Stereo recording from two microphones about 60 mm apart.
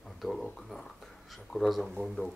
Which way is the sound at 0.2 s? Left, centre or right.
Centre.